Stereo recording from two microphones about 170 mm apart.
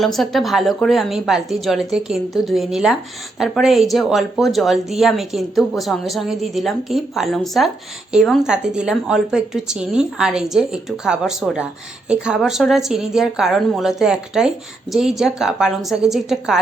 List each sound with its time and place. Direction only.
0.0 s speech: centre (ahead or behind)